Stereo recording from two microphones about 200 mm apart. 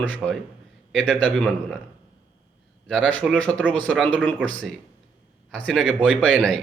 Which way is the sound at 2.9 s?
5° left (ahead or behind).